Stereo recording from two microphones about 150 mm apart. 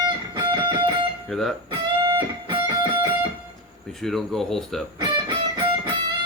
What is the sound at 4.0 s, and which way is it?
Speech, centre (ahead or behind).